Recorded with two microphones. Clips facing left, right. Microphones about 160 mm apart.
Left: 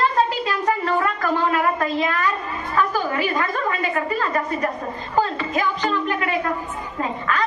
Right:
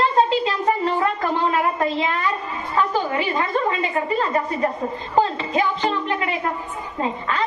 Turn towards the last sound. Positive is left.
turn(degrees=-25)  # may be behind; listen again after turning